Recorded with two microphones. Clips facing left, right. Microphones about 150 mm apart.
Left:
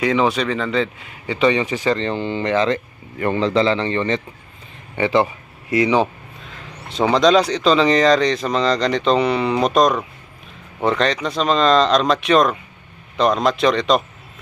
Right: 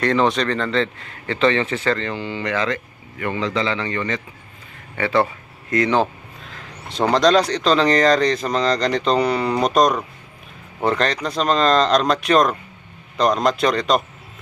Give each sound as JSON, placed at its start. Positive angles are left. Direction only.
{"t": 0.0, "sound": "a man's voice", "side_deg": 5}
{"t": 4.9, "sound": "a man's voice", "side_deg": 20}
{"t": 5.7, "sound": "speech", "side_deg": 5}